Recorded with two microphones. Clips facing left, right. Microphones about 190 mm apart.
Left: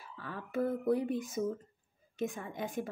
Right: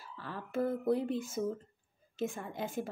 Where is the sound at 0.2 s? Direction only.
Centre (ahead or behind).